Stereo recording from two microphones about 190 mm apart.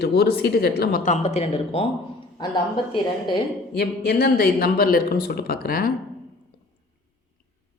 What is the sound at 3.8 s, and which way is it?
Speech, 55° left (ahead or behind).